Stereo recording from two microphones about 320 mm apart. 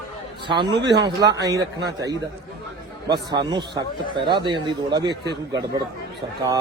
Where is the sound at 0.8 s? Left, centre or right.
Right.